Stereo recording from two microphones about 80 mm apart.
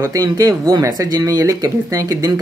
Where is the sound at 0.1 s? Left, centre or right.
Right.